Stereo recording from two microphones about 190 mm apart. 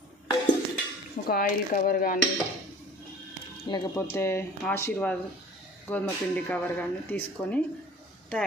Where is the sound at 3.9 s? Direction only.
15° left (ahead or behind).